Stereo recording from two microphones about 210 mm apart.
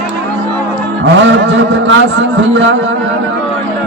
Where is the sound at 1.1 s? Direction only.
60° right (ahead or behind).